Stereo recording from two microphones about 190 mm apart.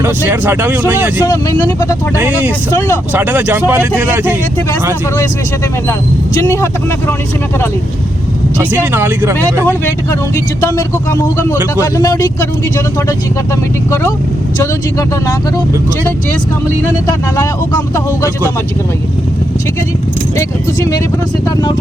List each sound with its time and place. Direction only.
0.0 s speech: 10° right (ahead or behind)
1.2 s speech: 20° left (ahead or behind)
2.1 s speech: 10° right (ahead or behind)
2.7 s speech: 15° left (ahead or behind)
3.1 s speech: 10° right (ahead or behind)
5.9 s speech: 15° left (ahead or behind)
8.7 s speech: 10° right (ahead or behind)
9.6 s speech: 10° left (ahead or behind)
14.6 s speech: 15° left (ahead or behind)
17.1 s speech: 20° left (ahead or behind)
20.3 s speech: 20° left (ahead or behind)